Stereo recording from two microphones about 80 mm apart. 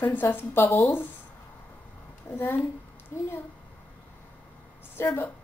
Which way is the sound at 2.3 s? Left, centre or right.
Left.